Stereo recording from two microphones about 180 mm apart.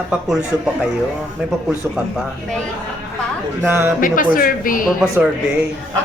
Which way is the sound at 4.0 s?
50° left (ahead or behind).